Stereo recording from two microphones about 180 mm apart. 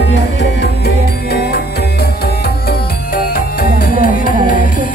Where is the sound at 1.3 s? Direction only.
60° left (ahead or behind).